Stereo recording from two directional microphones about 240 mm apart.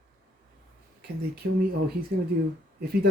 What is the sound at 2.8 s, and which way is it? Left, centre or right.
Speech, right.